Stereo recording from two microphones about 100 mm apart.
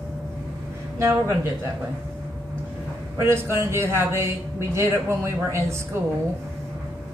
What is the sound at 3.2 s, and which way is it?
Speech, 25° right (ahead or behind).